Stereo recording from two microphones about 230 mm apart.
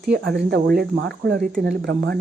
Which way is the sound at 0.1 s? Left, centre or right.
Right.